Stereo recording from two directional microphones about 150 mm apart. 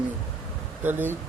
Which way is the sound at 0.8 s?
15° right (ahead or behind).